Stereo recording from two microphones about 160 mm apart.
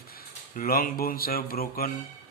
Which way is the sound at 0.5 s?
65° left (ahead or behind).